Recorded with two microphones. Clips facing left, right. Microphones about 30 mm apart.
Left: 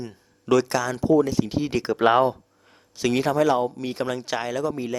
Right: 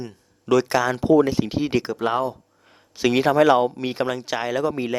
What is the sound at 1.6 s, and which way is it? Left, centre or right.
Speech, centre.